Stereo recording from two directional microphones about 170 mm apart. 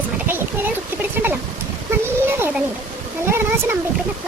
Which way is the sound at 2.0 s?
15° right (ahead or behind).